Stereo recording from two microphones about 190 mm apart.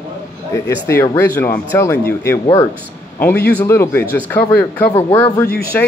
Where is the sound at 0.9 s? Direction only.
15° left (ahead or behind).